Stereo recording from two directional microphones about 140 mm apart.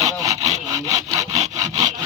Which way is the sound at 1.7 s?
55° right (ahead or behind).